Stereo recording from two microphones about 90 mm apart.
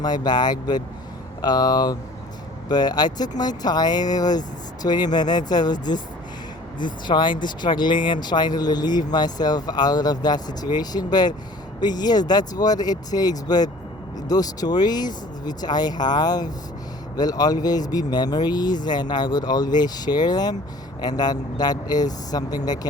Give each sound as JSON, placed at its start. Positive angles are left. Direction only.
{"t": 0.0, "sound": "speech", "side_deg": 50}